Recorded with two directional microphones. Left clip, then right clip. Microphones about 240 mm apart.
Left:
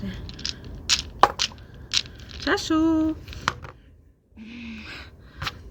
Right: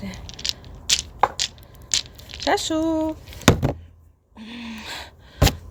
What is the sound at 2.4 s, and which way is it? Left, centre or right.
Speech, right.